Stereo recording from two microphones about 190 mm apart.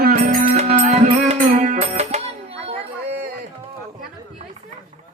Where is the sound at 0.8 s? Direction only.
40° right (ahead or behind).